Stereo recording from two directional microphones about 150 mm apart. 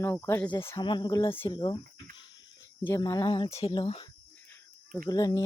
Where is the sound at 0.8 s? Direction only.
30° left (ahead or behind).